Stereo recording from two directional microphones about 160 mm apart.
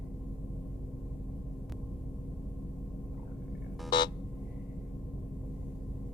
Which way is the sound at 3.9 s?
25° left (ahead or behind).